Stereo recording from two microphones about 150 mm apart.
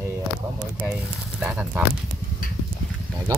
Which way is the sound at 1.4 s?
10° right (ahead or behind).